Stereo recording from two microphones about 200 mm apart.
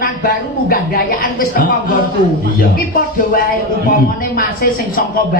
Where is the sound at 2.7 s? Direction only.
45° left (ahead or behind).